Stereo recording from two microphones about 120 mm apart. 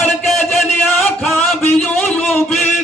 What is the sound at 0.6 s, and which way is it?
Music, centre (ahead or behind).